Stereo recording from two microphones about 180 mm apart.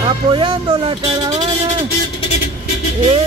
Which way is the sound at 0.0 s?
30° right (ahead or behind).